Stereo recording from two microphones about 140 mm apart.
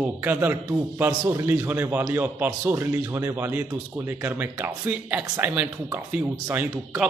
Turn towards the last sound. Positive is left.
turn(degrees=-10)  # may be behind; listen again after turning